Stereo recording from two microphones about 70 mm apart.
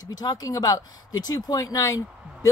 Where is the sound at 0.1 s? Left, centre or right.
Left.